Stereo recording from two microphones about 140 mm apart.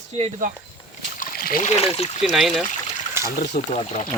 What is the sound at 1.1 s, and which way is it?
Splash, 90° left.